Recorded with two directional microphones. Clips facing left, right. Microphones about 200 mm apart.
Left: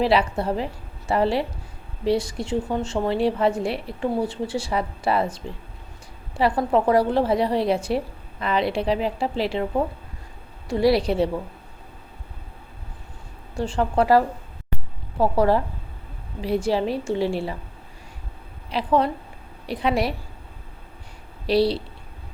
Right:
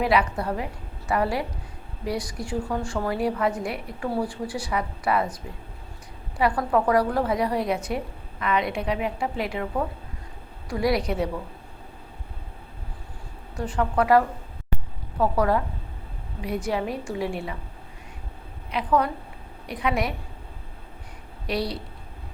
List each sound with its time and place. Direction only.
0.0 s a woman's voice: 30° left (ahead or behind)
13.6 s a woman's voice: 30° left (ahead or behind)
18.7 s a woman's voice: 30° left (ahead or behind)
21.4 s a woman's voice: 30° left (ahead or behind)